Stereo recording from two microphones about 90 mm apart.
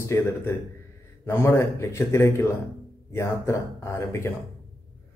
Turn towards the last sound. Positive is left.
turn(degrees=30)  # may be behind; listen again after turning